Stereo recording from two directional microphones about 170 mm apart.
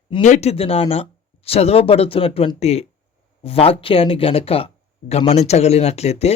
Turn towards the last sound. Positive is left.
turn(degrees=40)  # may be behind; listen again after turning